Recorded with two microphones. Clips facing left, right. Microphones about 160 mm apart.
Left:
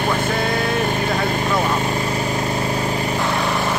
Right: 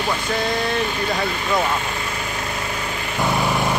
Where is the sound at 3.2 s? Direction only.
Centre (ahead or behind).